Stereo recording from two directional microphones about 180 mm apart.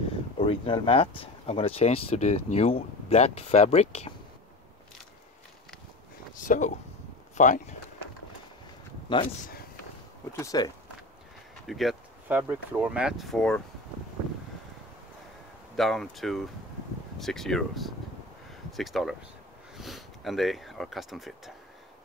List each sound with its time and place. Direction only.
0.4 s speech: 30° left (ahead or behind)
6.3 s speech: 45° left (ahead or behind)
9.1 s speech: 25° left (ahead or behind)
10.3 s speech: 20° left (ahead or behind)
11.6 s a sound: centre (ahead or behind)
12.4 s speech: 10° right (ahead or behind)
15.7 s speech: centre (ahead or behind)